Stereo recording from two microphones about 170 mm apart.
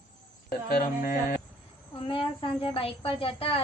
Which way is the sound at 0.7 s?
60° left (ahead or behind).